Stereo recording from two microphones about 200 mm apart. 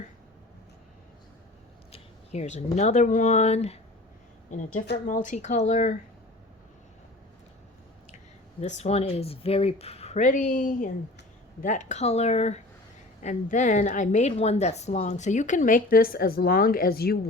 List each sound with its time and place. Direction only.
1.9 s a sound: 35° left (ahead or behind)
2.7 s a woman's voice: 35° left (ahead or behind)
5.0 s a woman's voice: 40° left (ahead or behind)
8.6 s a woman's voice: 35° left (ahead or behind); by 17.2 s 50° left (ahead or behind)